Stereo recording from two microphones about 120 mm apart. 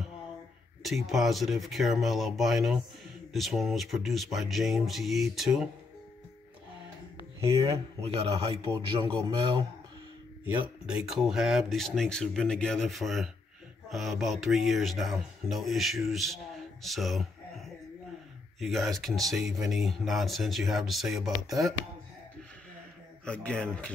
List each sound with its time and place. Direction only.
0.8 s speech: centre (ahead or behind)
8.0 s a man's voice: 55° right (ahead or behind)
9.0 s a man's voice: 45° right (ahead or behind)
10.4 s speech: 5° right (ahead or behind)
23.2 s speech: 10° left (ahead or behind)